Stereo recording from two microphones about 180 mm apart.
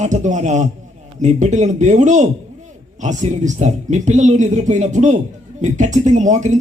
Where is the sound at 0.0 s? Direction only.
40° right (ahead or behind).